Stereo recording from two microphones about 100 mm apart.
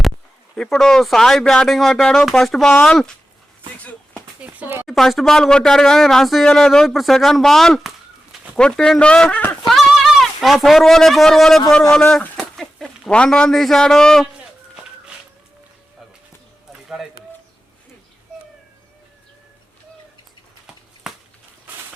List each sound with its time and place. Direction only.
0.5 s speech: 5° left (ahead or behind)
4.4 s speech: 15° right (ahead or behind)
4.9 s speech: centre (ahead or behind)
9.6 s speech: centre (ahead or behind)
21.1 s a sound: 5° right (ahead or behind)